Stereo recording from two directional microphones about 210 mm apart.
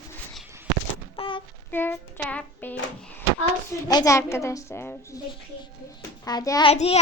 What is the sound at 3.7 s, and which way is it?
A woman's voice, 15° left (ahead or behind).